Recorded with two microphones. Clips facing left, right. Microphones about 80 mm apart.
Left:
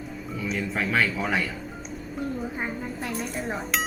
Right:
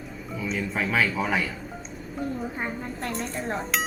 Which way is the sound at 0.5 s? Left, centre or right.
Centre.